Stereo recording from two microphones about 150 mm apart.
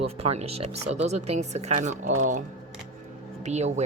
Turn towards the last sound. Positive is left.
turn(degrees=-50)  # may be behind; listen again after turning